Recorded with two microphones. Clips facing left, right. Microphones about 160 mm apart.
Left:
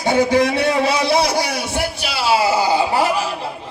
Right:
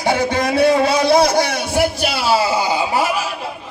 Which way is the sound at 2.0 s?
40° right (ahead or behind).